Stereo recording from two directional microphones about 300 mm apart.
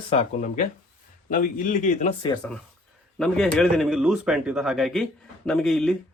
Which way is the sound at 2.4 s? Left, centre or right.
Centre.